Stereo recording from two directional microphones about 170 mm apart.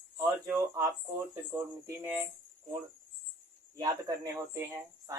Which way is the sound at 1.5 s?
15° right (ahead or behind).